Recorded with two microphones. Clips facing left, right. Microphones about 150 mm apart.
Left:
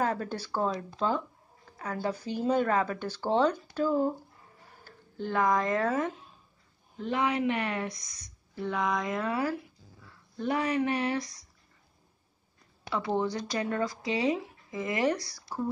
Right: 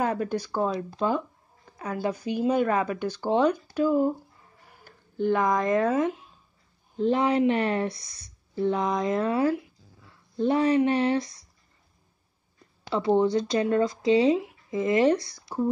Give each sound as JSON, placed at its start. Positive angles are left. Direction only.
{"t": 0.0, "sound": "speech", "side_deg": -15}
{"t": 7.0, "sound": "speech", "side_deg": -35}
{"t": 12.9, "sound": "speech", "side_deg": -25}